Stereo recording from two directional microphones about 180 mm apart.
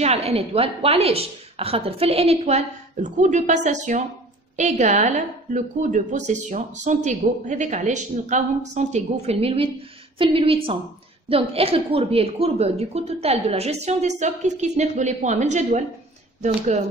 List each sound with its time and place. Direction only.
0.0 s a woman's voice: 35° right (ahead or behind)